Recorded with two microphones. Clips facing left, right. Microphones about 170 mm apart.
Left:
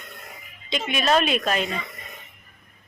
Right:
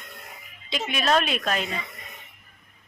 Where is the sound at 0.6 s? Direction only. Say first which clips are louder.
Left 2 dB; 5° right (ahead or behind).